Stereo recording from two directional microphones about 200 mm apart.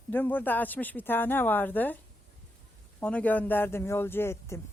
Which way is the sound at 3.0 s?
5° left (ahead or behind).